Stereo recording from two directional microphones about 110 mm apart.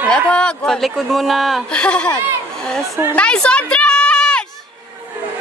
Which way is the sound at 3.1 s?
10° left (ahead or behind).